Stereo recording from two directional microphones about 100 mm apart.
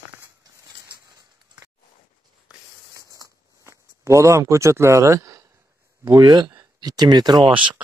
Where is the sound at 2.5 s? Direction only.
10° right (ahead or behind).